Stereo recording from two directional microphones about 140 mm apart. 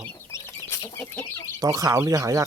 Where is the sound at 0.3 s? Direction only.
20° left (ahead or behind).